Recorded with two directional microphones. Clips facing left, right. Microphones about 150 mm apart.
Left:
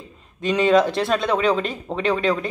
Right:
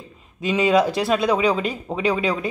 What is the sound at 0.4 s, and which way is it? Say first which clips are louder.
A man's voice: left 1 dB; 5° right (ahead or behind).